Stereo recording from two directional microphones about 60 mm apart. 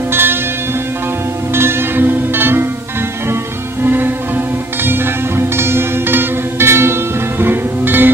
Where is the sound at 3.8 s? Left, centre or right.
Right.